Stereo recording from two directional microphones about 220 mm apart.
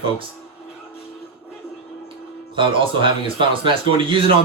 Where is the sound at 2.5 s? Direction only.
25° right (ahead or behind).